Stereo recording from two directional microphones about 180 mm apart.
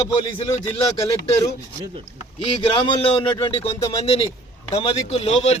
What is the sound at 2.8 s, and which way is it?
A man's voice, 25° left (ahead or behind).